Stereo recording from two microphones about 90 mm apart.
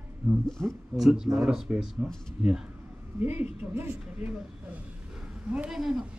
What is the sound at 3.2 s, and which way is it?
A woman's voice, 20° right (ahead or behind).